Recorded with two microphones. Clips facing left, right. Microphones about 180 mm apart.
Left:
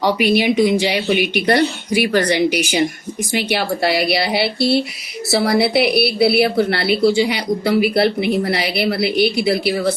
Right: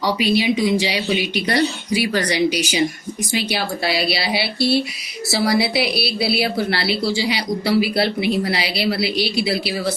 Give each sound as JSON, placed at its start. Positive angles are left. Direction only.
{"t": 0.0, "sound": "speech", "side_deg": 55}